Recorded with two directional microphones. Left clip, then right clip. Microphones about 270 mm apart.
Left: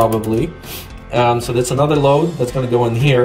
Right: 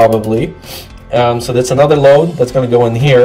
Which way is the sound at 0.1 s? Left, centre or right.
Centre.